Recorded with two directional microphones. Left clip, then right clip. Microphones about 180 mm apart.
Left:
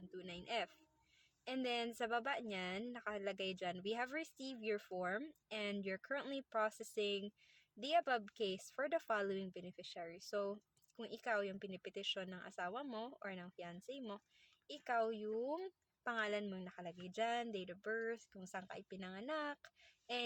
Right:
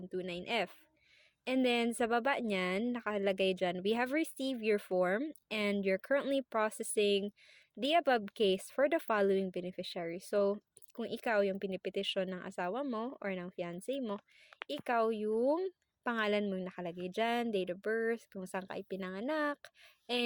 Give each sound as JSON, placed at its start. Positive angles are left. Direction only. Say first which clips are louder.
{"t": 0.1, "sound": "speech", "louder": "right 8 dB", "side_deg": -45}